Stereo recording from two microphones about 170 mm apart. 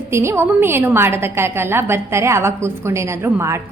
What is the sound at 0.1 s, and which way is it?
A woman's voice, 15° right (ahead or behind).